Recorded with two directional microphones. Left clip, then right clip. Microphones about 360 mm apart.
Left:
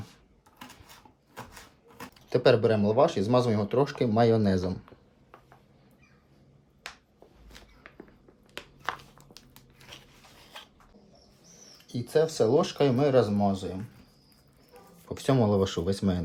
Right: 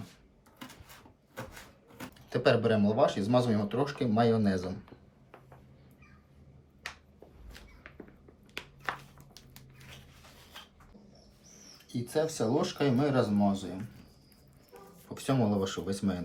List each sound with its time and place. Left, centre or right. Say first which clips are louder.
2.0 s speech: left 7 dB; centre
8.5 s a sound: left 2 dB; centre
11.9 s speech: left 6 dB; centre
15.1 s speech: left 5 dB; centre